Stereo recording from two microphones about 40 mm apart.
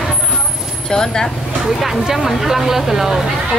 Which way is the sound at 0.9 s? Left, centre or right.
Centre.